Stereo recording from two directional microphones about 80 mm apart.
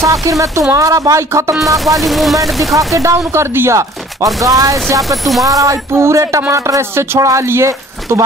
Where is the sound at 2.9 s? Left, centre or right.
Right.